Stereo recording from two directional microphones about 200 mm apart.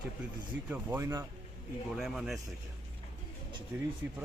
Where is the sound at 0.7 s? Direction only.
10° right (ahead or behind).